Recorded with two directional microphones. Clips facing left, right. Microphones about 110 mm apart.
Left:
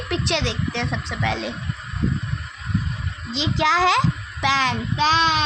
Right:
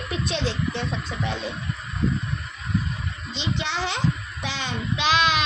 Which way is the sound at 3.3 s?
90° left.